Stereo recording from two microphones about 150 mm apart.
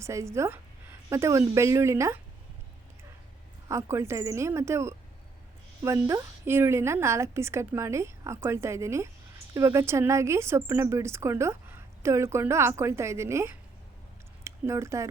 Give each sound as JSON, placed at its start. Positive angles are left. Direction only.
{"t": 0.0, "sound": "a woman's voice", "side_deg": -20}
{"t": 3.7, "sound": "a woman's voice", "side_deg": -20}